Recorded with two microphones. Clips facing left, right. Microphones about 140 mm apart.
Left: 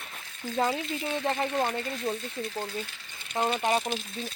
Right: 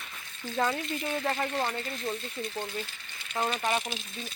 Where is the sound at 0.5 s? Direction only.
15° left (ahead or behind).